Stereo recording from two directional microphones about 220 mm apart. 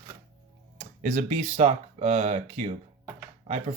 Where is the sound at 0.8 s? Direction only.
35° right (ahead or behind).